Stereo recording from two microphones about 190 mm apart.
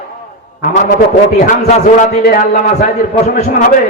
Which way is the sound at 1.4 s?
40° left (ahead or behind).